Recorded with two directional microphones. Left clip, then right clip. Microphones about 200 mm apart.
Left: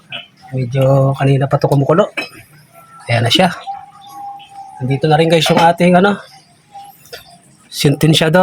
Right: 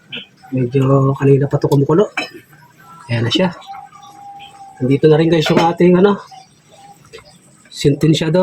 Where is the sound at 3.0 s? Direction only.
55° left (ahead or behind).